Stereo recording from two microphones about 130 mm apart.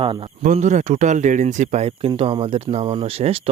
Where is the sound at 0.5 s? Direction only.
65° right (ahead or behind).